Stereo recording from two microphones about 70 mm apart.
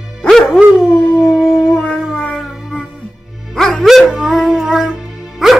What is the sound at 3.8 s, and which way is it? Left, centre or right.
Music, centre.